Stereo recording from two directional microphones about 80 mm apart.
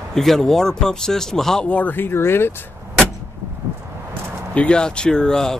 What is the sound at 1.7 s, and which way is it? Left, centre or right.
Speech, centre.